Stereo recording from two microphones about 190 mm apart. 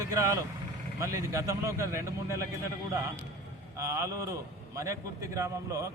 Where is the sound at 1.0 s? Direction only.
15° right (ahead or behind).